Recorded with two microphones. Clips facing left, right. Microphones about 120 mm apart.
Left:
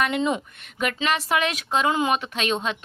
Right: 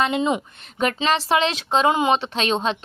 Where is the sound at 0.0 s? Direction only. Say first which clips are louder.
Right 2 dB; 20° right (ahead or behind).